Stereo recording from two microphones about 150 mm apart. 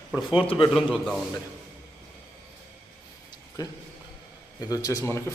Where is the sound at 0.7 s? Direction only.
Centre (ahead or behind).